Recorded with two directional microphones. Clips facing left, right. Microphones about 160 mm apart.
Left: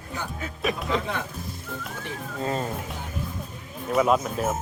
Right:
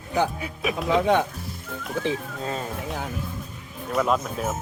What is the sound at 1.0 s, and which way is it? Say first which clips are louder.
Speech: right 11 dB; 90° right.